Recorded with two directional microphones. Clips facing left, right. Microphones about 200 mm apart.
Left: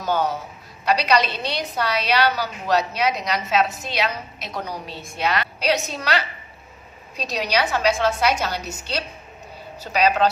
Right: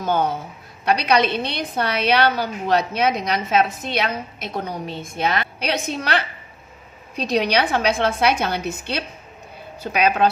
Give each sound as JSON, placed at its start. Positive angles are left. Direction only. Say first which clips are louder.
{"t": 0.0, "sound": "a woman's voice", "louder": "right 2 dB", "side_deg": -55}